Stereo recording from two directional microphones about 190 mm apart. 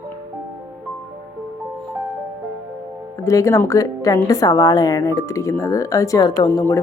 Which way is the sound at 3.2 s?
15° left (ahead or behind).